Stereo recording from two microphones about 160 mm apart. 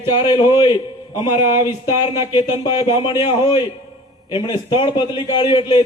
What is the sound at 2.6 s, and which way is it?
Speech, 30° left (ahead or behind).